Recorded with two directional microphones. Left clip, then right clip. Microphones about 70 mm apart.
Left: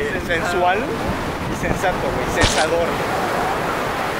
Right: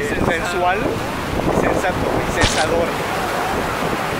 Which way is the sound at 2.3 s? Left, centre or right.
Centre.